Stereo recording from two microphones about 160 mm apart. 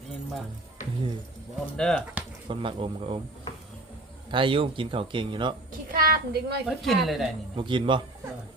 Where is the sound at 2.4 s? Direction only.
35° right (ahead or behind).